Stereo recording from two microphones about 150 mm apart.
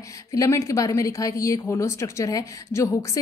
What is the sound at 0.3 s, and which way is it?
A woman's voice, 20° left (ahead or behind).